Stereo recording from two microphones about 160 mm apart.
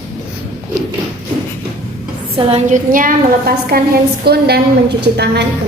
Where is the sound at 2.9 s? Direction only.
65° right (ahead or behind).